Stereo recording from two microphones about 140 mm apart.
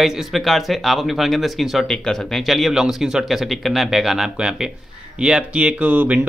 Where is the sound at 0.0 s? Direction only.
Centre (ahead or behind).